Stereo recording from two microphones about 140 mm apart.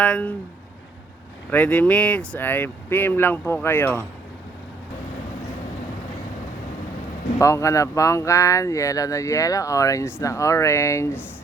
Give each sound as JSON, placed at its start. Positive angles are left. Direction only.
{"t": 0.0, "sound": "speech", "side_deg": 10}
{"t": 1.5, "sound": "speech", "side_deg": 10}
{"t": 7.3, "sound": "speech", "side_deg": 20}